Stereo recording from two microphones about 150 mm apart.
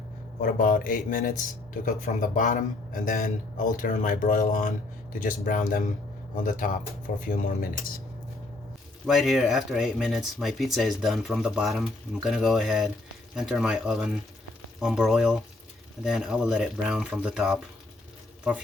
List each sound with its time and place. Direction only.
0.4 s a man's voice: 65° left (ahead or behind)
9.0 s speech: centre (ahead or behind)